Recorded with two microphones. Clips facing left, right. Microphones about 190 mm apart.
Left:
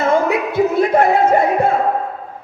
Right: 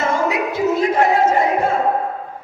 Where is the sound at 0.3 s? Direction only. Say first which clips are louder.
Left 2 dB; 55° left (ahead or behind).